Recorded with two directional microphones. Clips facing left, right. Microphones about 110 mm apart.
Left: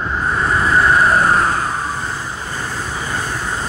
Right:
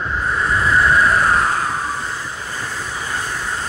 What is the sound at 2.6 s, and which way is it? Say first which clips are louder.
Vehicle: left 2 dB; 30° left (ahead or behind).